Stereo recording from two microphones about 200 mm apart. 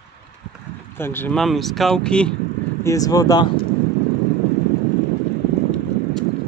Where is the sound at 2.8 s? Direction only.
15° left (ahead or behind).